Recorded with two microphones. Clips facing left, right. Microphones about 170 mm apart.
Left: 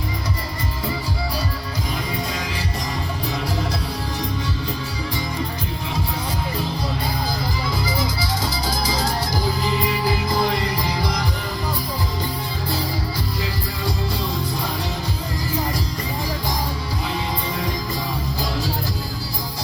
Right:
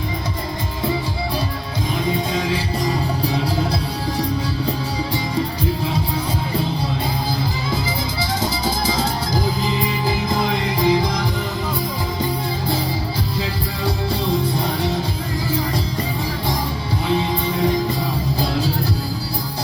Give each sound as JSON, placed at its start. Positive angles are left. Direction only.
{"t": 8.2, "sound": "music", "side_deg": -25}